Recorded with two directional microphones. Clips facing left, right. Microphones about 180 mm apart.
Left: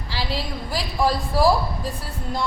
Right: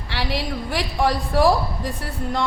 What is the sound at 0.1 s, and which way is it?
Speech, 75° right (ahead or behind).